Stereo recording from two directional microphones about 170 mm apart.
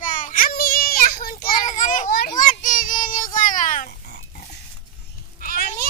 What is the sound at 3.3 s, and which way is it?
Oink, 50° left (ahead or behind).